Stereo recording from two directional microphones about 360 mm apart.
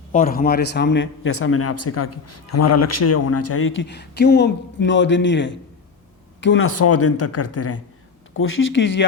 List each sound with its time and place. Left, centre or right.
0.1 s a man's voice: left